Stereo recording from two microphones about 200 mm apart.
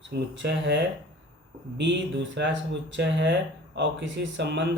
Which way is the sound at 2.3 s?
60° right (ahead or behind).